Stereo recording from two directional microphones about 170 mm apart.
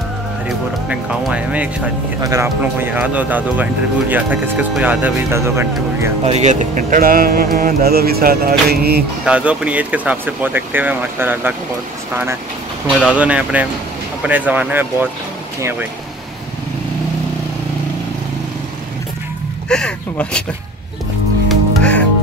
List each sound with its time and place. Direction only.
0.5 s speech: 5° right (ahead or behind)
6.2 s speech: 40° right (ahead or behind); by 7.4 s 60° right (ahead or behind)
7.5 s music: 60° right (ahead or behind)
9.2 s speech: 5° right (ahead or behind)
13.0 s speech: 10° right (ahead or behind)
19.7 s speech: 5° left (ahead or behind)
21.5 s music: 5° left (ahead or behind)